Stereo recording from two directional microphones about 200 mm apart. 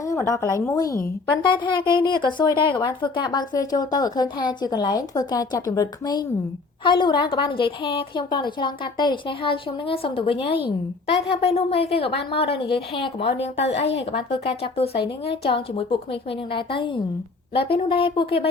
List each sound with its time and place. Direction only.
0.0 s a woman's voice: 15° left (ahead or behind)